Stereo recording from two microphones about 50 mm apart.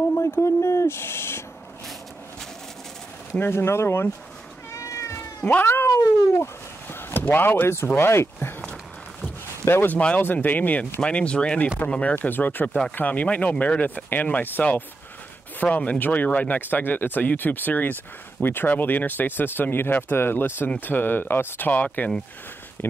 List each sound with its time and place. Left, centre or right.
0.1 s speech: left
3.3 s speech: left
3.6 s speech: left
4.7 s cat: left
5.4 s speech: left
5.7 s speech: left
8.4 s a sound: left
10.2 s speech: left
10.8 s speech: left
15.6 s speech: left